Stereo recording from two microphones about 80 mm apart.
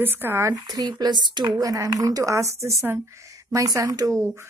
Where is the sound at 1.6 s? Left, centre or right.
Right.